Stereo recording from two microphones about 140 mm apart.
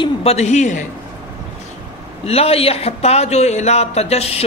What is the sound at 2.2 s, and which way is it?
A man's voice, 45° left (ahead or behind).